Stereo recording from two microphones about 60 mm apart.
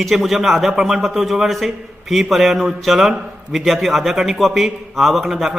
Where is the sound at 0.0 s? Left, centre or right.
Centre.